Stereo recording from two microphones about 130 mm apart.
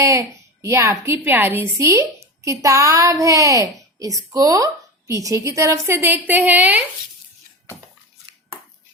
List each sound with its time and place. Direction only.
0.0 s a woman's voice: 25° right (ahead or behind)